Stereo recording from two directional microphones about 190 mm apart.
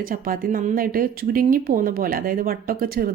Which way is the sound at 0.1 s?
45° right (ahead or behind).